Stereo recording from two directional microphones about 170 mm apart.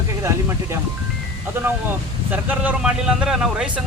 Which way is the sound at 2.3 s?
10° right (ahead or behind).